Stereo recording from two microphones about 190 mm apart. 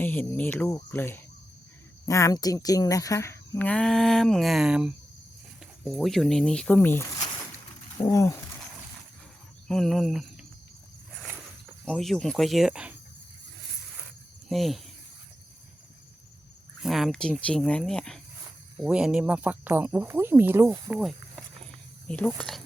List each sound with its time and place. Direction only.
0.0 s speech: 10° left (ahead or behind)
9.6 s speech: centre (ahead or behind)
11.9 s speech: centre (ahead or behind)
14.5 s speech: centre (ahead or behind)
16.8 s speech: centre (ahead or behind)